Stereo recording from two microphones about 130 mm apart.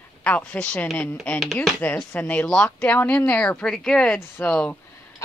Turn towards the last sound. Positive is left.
turn(degrees=10)  # may be behind; listen again after turning